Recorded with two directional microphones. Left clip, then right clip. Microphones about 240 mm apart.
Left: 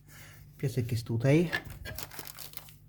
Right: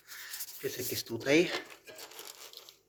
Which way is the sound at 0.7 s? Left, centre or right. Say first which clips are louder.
Right 1 dB; centre.